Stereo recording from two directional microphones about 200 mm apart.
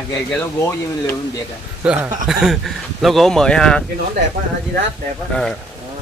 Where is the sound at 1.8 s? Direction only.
5° right (ahead or behind).